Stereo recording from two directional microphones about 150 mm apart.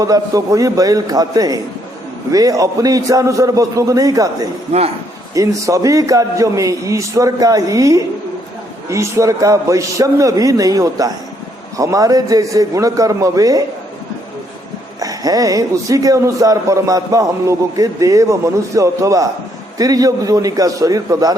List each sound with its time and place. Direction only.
0.0 s speech: 25° right (ahead or behind)
4.7 s a man's voice: 45° right (ahead or behind)
5.3 s speech: 20° right (ahead or behind)
15.0 s speech: 25° right (ahead or behind)